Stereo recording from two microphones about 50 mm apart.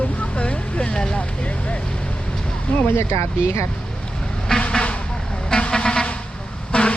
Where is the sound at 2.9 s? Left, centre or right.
Left.